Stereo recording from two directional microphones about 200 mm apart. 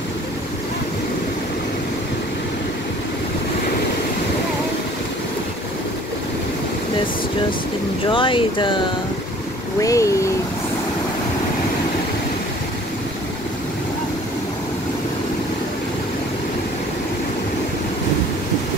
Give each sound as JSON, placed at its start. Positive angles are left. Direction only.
{"t": 8.1, "sound": "speech", "side_deg": 25}